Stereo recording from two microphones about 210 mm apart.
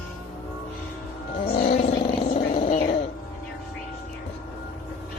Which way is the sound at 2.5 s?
30° left (ahead or behind).